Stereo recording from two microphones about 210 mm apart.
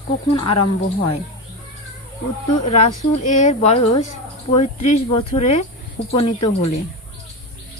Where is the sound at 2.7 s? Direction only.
35° left (ahead or behind).